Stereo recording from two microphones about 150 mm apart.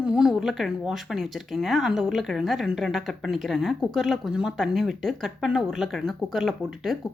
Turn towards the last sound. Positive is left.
turn(degrees=0)  # may be behind; listen again after turning